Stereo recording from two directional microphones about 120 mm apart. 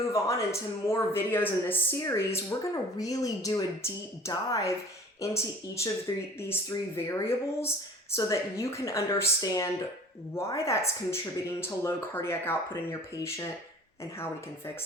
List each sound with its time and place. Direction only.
0.1 s speech: 25° left (ahead or behind)